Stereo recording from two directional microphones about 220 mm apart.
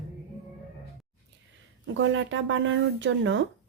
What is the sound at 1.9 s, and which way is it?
Speech, 60° right (ahead or behind).